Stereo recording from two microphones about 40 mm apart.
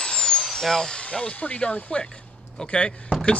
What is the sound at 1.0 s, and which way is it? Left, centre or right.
Speech, left.